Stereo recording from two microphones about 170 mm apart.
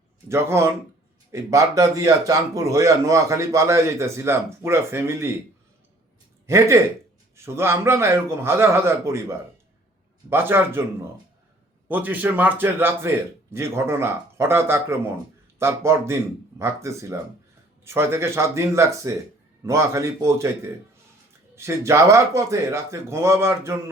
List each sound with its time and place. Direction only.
0.3 s speech: 15° right (ahead or behind)
6.5 s speech: 15° right (ahead or behind)
10.2 s speech: 15° right (ahead or behind)
11.9 s speech: 10° right (ahead or behind)
21.5 s speech: 15° right (ahead or behind)